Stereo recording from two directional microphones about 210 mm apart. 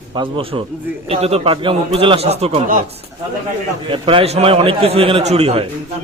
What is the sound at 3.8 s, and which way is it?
A man's voice, 25° right (ahead or behind).